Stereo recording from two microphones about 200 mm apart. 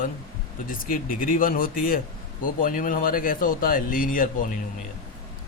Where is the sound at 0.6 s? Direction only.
45° left (ahead or behind).